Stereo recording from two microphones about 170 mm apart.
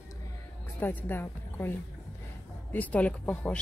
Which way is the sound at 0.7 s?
10° left (ahead or behind).